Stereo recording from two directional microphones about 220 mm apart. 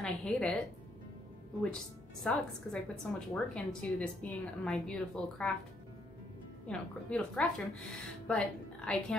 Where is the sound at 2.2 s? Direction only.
5° left (ahead or behind).